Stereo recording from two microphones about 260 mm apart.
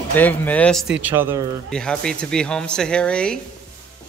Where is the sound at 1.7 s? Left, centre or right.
Centre.